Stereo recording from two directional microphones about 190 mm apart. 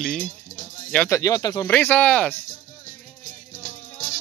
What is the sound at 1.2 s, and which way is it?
Speech, 20° left (ahead or behind).